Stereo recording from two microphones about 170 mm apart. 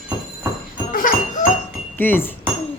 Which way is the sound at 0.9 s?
50° left (ahead or behind).